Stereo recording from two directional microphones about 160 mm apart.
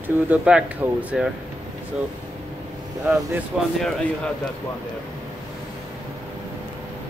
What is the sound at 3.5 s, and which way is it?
Speech, 5° right (ahead or behind).